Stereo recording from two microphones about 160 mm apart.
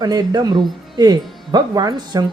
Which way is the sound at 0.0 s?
25° right (ahead or behind).